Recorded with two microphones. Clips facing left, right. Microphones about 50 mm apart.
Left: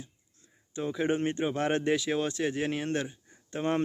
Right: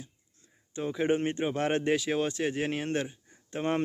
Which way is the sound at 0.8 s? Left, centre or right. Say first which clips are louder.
Right 1 dB; centre.